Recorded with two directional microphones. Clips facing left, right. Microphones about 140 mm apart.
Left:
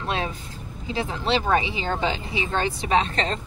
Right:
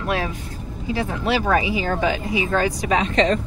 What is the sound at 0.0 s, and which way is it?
Vehicle, 25° left (ahead or behind).